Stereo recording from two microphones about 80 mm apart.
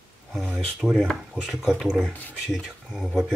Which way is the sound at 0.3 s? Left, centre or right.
Centre.